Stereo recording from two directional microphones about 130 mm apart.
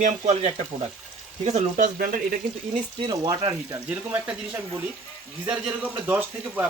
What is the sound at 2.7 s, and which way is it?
Speech, 40° right (ahead or behind).